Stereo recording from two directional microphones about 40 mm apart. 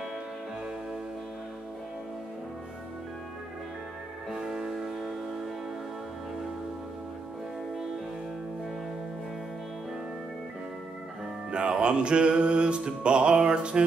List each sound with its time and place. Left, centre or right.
4.3 s music: centre
11.5 s music: right